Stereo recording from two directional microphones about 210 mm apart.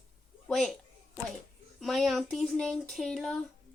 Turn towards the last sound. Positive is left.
turn(degrees=5)  # may be behind; listen again after turning